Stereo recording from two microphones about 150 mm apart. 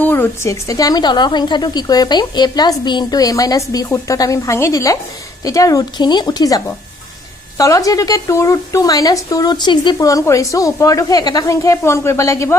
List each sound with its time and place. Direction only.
0.0 s speech: 15° left (ahead or behind)